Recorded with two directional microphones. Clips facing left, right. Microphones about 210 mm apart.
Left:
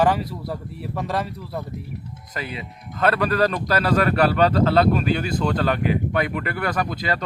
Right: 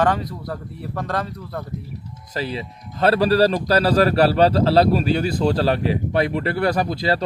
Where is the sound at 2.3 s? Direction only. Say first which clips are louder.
Right 5 dB; 35° right (ahead or behind).